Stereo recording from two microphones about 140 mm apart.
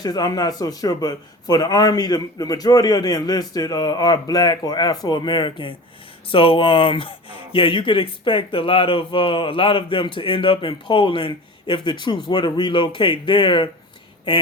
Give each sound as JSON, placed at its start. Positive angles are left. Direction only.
{"t": 0.0, "sound": "a man's voice", "side_deg": 30}